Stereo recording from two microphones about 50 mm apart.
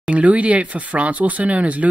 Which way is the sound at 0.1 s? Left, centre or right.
Right.